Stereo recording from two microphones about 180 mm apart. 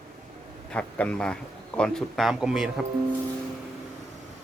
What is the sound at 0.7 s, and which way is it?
Speech, 5° left (ahead or behind).